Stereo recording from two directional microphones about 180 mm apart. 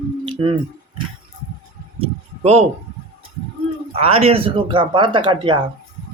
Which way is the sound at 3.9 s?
30° right (ahead or behind).